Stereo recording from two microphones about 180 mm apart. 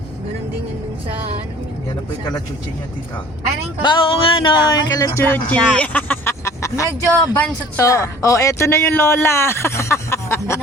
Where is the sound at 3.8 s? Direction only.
25° left (ahead or behind).